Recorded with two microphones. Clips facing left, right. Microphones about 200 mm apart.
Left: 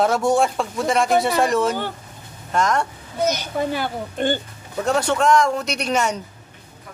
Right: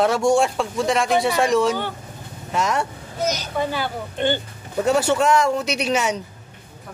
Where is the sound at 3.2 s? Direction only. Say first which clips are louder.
Left 2 dB; 50° left (ahead or behind).